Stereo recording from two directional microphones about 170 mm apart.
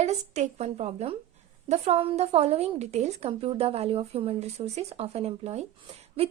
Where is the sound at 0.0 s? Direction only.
40° right (ahead or behind).